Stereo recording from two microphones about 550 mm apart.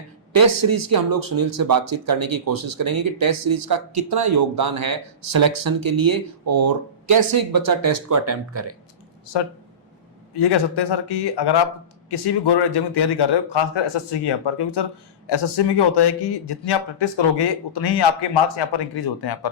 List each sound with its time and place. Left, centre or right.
0.3 s speech: right
10.5 s a man's voice: left